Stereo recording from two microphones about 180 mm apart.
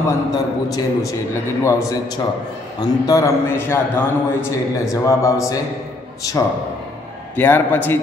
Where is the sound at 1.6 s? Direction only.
15° left (ahead or behind).